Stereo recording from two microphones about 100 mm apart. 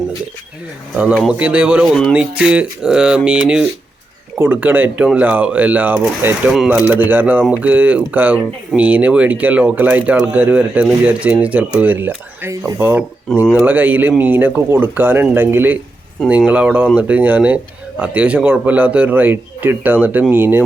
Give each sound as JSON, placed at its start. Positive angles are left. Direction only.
{"t": 1.3, "sound": "speech", "side_deg": -15}
{"t": 4.4, "sound": "speech", "side_deg": -20}